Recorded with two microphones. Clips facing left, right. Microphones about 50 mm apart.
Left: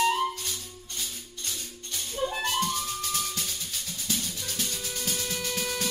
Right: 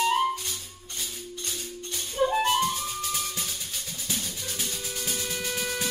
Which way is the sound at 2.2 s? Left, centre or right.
Right.